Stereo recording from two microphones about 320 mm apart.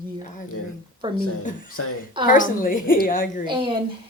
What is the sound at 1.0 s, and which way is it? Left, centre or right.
Speech, centre.